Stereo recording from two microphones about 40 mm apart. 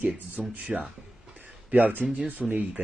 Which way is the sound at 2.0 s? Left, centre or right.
Right.